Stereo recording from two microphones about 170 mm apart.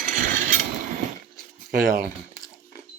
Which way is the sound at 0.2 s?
50° right (ahead or behind).